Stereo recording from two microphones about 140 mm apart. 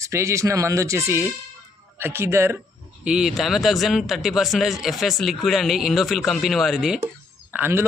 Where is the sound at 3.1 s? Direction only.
5° right (ahead or behind).